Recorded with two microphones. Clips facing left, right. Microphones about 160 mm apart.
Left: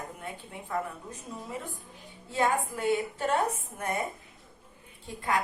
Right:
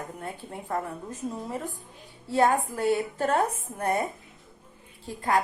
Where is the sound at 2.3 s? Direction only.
40° right (ahead or behind).